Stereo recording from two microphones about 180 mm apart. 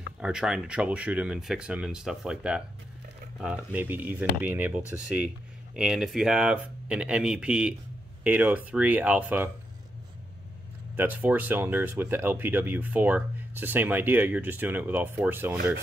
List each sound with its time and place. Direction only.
0.2 s speech: 5° right (ahead or behind)
11.0 s speech: 10° right (ahead or behind)